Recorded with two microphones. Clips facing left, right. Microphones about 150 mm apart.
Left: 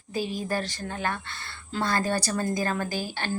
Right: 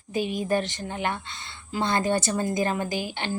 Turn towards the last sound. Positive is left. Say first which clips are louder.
# right 1 dB
turn(degrees=-20)  # may be behind; listen again after turning